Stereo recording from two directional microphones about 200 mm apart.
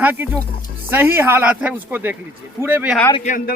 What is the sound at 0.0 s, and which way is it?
Speech, 10° right (ahead or behind).